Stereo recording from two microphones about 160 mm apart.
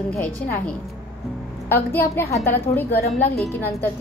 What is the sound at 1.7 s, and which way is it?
A woman's voice, 15° left (ahead or behind).